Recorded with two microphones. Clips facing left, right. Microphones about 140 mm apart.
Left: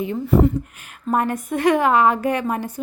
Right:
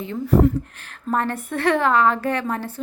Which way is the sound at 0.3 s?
Centre (ahead or behind).